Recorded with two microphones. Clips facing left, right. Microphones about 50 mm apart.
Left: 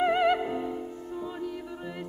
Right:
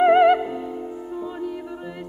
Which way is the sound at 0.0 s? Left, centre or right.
Centre.